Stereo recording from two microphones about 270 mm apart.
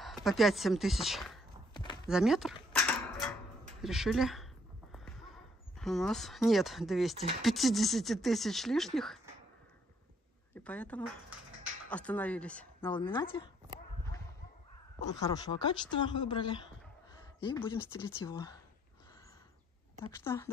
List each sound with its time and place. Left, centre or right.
0.0 s speech: centre
1.7 s a sound: centre
2.0 s speech: centre
3.8 s speech: centre
5.8 s speech: centre
10.5 s speech: centre
12.8 s speech: centre
15.0 s speech: centre
20.1 s speech: centre